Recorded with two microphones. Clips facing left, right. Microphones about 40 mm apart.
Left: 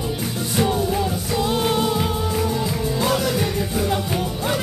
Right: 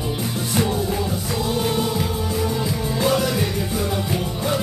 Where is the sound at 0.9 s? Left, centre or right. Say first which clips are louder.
Left 2 dB; centre.